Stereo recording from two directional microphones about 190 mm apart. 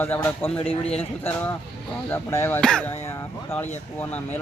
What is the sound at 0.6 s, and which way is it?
Speech, 30° left (ahead or behind).